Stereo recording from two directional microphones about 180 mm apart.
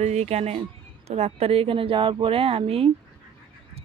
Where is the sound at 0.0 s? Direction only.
40° right (ahead or behind).